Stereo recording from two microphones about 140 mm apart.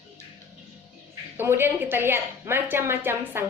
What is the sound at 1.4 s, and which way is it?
A woman's voice, 15° right (ahead or behind).